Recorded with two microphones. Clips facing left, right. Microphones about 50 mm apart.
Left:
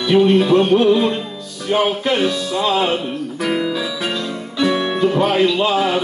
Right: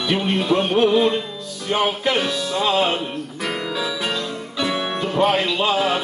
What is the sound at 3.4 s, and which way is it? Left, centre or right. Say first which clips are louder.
Speech: left 5 dB; centre.